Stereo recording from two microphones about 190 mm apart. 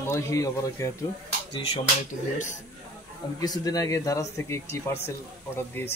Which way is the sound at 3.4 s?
20° left (ahead or behind).